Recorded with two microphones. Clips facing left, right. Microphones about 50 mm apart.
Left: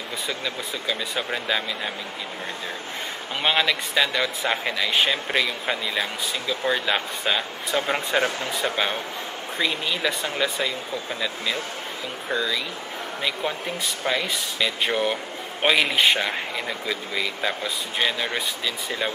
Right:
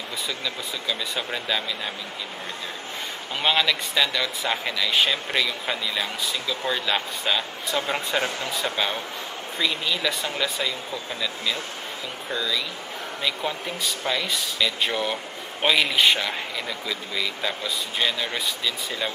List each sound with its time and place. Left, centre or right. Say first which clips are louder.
0.8 s speech: left 2 dB; centre
3.4 s speech: even; centre
12.3 s speech: left 2 dB; left